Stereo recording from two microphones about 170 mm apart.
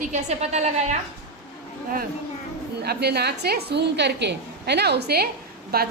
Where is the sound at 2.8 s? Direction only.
70° right (ahead or behind).